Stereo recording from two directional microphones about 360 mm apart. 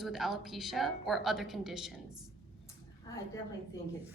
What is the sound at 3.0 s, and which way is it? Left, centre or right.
Speech, centre.